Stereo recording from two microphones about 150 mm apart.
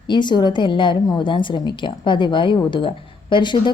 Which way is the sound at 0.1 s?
30° left (ahead or behind).